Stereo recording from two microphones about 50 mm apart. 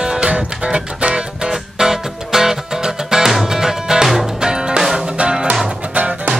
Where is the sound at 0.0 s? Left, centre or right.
Centre.